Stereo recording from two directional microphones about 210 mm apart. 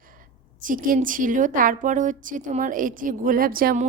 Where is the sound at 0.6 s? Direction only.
40° right (ahead or behind).